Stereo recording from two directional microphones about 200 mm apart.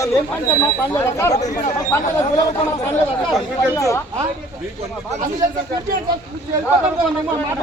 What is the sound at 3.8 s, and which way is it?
Speech, 15° left (ahead or behind).